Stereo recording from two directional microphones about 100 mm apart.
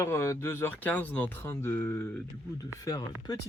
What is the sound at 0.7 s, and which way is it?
Speech, 15° left (ahead or behind).